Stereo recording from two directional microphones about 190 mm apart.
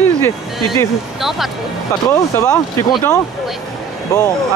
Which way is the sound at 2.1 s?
15° left (ahead or behind).